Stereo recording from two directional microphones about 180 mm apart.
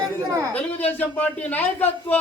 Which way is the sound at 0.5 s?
35° left (ahead or behind).